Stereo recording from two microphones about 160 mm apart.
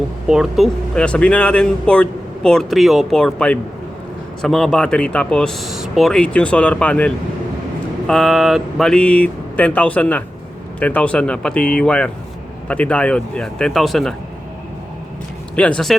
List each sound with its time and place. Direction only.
0.3 s speech: centre (ahead or behind)
15.5 s speech: 5° left (ahead or behind)